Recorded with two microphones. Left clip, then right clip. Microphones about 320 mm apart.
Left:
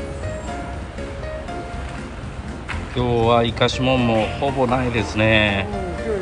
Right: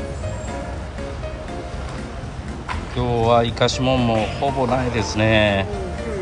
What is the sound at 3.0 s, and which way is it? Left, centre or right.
Speech, centre.